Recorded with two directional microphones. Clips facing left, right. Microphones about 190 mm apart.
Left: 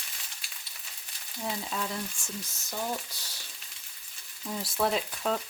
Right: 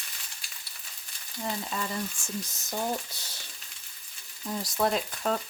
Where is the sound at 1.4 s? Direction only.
Centre (ahead or behind).